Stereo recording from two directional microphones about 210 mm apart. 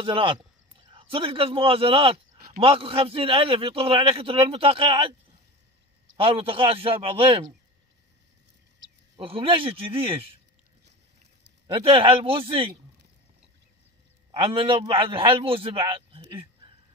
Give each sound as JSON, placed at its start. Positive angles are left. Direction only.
{"t": 0.0, "sound": "a man's voice", "side_deg": -25}
{"t": 6.1, "sound": "a man's voice", "side_deg": -25}
{"t": 9.1, "sound": "a man's voice", "side_deg": -25}
{"t": 11.6, "sound": "a man's voice", "side_deg": -25}
{"t": 14.3, "sound": "a man's voice", "side_deg": -25}